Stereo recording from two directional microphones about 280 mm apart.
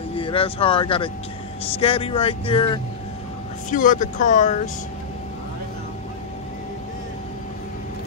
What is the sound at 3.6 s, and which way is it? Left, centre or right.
Speech, left.